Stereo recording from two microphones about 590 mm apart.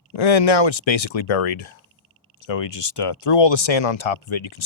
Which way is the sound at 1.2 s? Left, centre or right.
Left.